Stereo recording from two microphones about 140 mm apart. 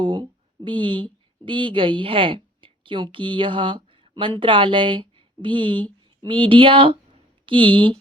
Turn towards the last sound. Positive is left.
turn(degrees=-35)  # may be behind; listen again after turning